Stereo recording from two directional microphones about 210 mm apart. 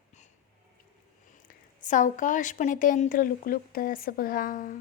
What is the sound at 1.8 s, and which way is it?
Speech, 35° left (ahead or behind).